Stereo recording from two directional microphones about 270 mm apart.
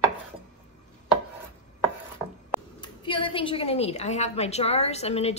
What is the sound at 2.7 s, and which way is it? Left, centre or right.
A woman's voice, centre.